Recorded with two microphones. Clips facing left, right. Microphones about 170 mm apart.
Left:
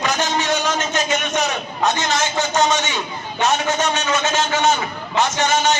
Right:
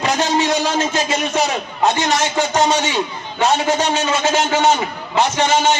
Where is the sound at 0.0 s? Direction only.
35° right (ahead or behind).